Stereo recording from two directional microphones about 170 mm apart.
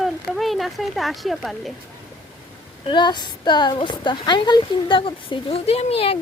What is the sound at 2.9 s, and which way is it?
A woman's voice, 25° left (ahead or behind).